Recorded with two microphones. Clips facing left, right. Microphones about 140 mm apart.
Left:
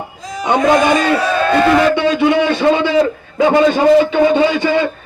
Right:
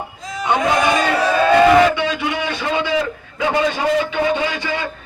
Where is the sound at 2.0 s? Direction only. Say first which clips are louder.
Left 9 dB; 30° left (ahead or behind).